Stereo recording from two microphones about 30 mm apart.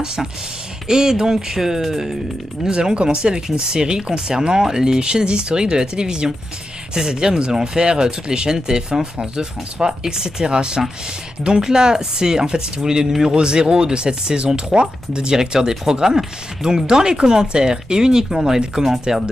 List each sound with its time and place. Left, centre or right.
0.0 s speech: right
2.7 s speech: right
15.3 s speech: centre
18.8 s speech: centre